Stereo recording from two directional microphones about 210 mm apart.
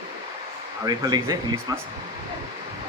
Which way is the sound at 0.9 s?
20° right (ahead or behind).